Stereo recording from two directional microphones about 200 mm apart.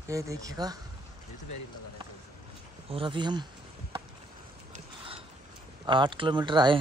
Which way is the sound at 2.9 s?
25° right (ahead or behind).